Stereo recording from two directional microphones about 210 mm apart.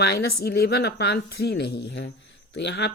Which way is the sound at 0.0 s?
50° left (ahead or behind).